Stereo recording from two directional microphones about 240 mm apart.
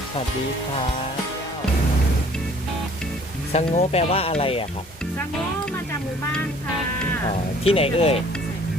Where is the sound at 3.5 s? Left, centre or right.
Left.